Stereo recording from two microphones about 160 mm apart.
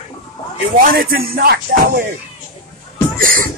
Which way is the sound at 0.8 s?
65° right (ahead or behind).